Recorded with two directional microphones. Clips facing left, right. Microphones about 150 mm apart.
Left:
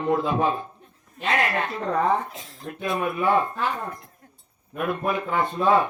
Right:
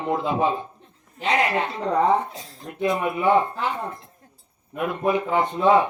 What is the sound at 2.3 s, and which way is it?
Speech, 35° right (ahead or behind).